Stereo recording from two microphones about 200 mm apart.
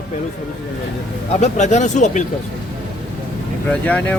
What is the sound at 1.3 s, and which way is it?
Speech, 35° left (ahead or behind).